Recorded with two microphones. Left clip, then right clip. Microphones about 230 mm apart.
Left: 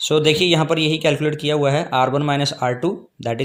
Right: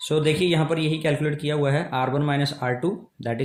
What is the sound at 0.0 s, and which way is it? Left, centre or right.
Speech, left.